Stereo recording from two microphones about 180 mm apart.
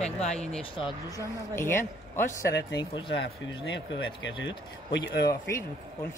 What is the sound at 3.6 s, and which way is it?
Speech, 85° left.